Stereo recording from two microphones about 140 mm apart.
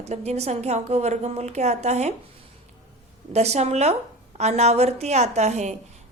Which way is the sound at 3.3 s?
50° right (ahead or behind).